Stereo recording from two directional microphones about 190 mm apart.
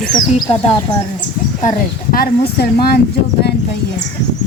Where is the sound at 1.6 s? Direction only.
45° left (ahead or behind).